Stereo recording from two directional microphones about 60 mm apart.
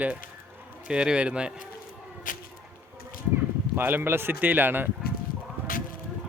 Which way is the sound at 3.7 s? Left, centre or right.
Right.